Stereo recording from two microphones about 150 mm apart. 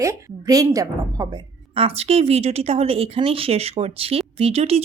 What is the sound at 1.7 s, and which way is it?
Speech, 40° right (ahead or behind).